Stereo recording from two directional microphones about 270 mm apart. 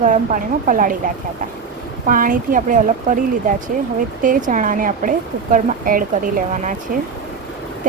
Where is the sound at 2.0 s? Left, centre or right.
Right.